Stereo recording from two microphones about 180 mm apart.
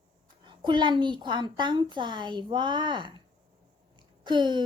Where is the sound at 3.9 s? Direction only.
25° right (ahead or behind).